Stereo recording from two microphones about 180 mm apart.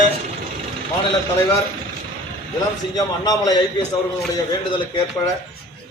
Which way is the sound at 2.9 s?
20° left (ahead or behind).